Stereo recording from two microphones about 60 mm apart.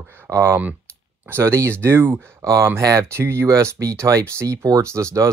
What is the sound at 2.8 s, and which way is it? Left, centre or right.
Speech, right.